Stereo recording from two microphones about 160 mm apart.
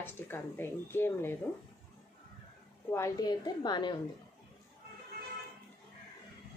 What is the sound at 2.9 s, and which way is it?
A woman's voice, 20° left (ahead or behind).